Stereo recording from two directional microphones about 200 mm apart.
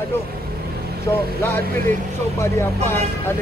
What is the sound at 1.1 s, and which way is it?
Speech, 10° left (ahead or behind).